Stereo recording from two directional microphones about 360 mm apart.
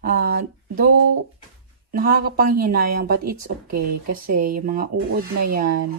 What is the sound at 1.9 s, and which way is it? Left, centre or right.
Speech, right.